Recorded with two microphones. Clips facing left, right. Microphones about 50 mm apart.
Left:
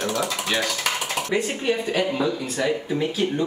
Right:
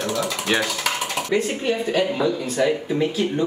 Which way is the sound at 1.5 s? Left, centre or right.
Centre.